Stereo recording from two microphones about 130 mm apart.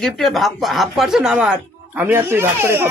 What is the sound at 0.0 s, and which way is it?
Speech, centre (ahead or behind).